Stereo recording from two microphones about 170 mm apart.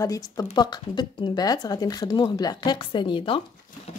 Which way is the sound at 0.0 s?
20° left (ahead or behind).